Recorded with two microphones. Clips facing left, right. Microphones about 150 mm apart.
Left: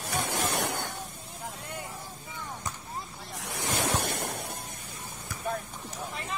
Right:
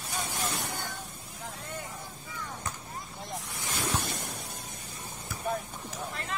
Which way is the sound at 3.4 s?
70° left (ahead or behind).